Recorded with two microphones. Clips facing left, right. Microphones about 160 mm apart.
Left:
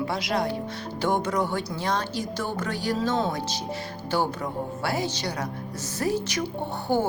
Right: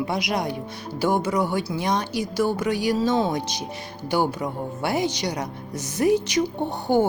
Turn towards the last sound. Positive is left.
turn(degrees=-15)  # may be behind; listen again after turning